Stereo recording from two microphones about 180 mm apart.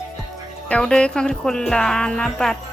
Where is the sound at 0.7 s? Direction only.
5° left (ahead or behind).